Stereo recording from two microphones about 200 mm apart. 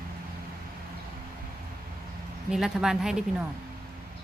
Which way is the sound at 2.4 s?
Centre (ahead or behind).